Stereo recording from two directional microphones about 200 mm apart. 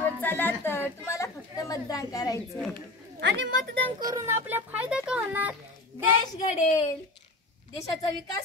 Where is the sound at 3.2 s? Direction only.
60° right (ahead or behind).